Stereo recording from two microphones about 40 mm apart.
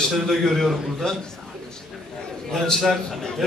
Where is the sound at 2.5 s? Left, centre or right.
Centre.